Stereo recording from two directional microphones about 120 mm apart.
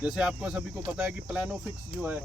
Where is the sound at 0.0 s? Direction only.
5° right (ahead or behind).